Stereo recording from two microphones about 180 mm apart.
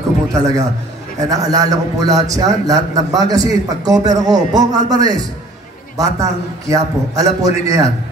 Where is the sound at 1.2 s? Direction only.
20° right (ahead or behind).